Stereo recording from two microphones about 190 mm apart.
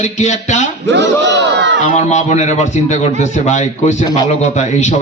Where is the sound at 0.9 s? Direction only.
70° right (ahead or behind).